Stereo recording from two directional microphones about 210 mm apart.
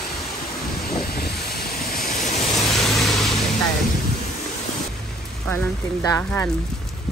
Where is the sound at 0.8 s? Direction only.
45° left (ahead or behind).